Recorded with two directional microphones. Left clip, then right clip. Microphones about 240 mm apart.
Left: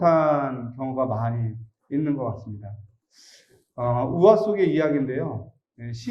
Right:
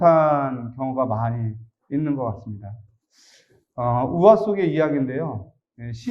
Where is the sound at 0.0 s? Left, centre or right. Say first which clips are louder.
Right 3 dB; right.